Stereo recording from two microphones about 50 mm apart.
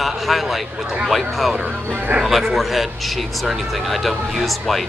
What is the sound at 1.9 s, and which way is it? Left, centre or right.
Speech, right.